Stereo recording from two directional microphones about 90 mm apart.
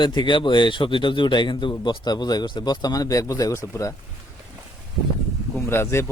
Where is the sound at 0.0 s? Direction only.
55° left (ahead or behind); by 3.9 s 35° left (ahead or behind).